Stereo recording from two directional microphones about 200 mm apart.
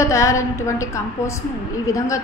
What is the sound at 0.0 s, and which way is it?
A woman's voice, 15° left (ahead or behind).